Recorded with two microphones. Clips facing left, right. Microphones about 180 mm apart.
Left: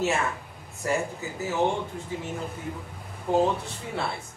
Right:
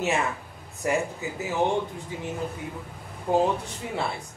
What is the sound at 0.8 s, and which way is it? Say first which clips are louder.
Speech: right 2 dB; 20° right (ahead or behind).